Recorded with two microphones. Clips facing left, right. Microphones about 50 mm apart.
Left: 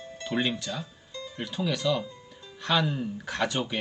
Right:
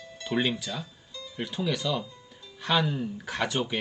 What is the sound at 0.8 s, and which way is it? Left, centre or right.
Music, left.